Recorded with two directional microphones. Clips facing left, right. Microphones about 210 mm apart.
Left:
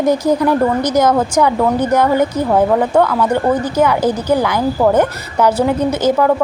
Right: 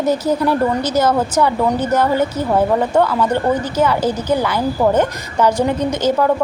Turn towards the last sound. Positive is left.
turn(degrees=5)  # may be behind; listen again after turning